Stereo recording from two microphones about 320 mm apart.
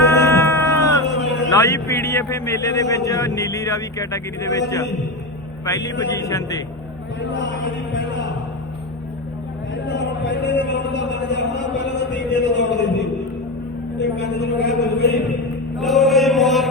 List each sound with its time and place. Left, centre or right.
0.0 s cat: centre
1.2 s a sound: left
1.5 s a man's voice: centre
5.6 s speech: centre
7.2 s chant: left
9.8 s music: left
11.1 s a man's voice: left
15.8 s music: centre